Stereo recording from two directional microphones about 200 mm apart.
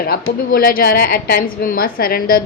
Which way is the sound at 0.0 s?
50° left (ahead or behind).